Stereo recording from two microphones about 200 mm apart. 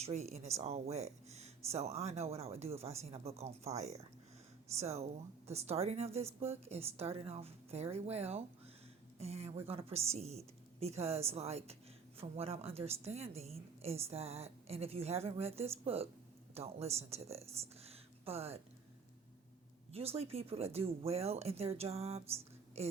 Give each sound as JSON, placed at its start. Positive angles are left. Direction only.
{"t": 0.0, "sound": "speech", "side_deg": -35}
{"t": 4.8, "sound": "speech", "side_deg": -35}
{"t": 19.9, "sound": "speech", "side_deg": -30}